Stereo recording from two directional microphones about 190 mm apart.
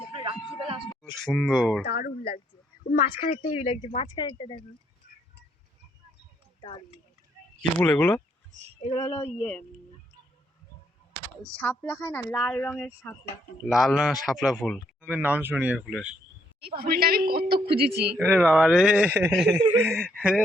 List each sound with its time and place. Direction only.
0.2 s music: 25° right (ahead or behind)
1.2 s speech: centre (ahead or behind)
1.8 s speech: 55° left (ahead or behind)
3.2 s speech: 35° left (ahead or behind)
6.6 s speech: 25° left (ahead or behind)
7.8 s speech: 10° left (ahead or behind)
9.0 s speech: 35° left (ahead or behind)
9.4 s speech: 5° left (ahead or behind)
11.5 s speech: 5° left (ahead or behind)
13.7 s speech: centre (ahead or behind)
16.6 s speech: 55° right (ahead or behind)
18.3 s speech: centre (ahead or behind)